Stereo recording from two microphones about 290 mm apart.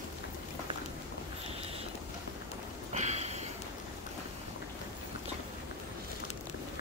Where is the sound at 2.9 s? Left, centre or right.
Right.